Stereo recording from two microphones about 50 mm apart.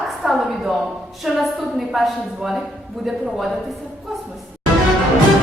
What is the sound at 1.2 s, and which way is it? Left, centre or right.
A woman's voice, centre.